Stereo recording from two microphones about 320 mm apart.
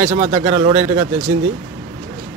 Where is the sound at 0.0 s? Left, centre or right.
Centre.